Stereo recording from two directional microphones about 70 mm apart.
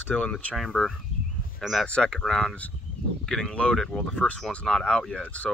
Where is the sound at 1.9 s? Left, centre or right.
Centre.